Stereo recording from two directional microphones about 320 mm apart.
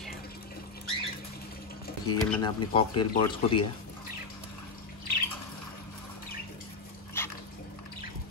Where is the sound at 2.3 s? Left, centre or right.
Centre.